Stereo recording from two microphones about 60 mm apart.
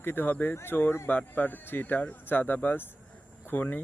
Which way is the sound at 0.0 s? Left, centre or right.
Left.